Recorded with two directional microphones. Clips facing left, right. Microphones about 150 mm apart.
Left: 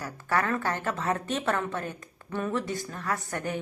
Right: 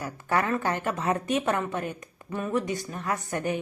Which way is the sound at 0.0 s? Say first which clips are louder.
Right 1 dB; 20° right (ahead or behind).